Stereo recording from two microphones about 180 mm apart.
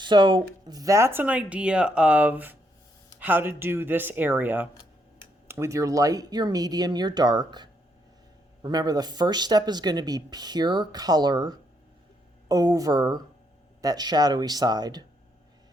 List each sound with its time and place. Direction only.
0.0 s speech: 25° right (ahead or behind)